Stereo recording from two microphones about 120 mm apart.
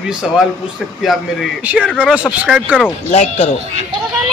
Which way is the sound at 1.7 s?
10° right (ahead or behind).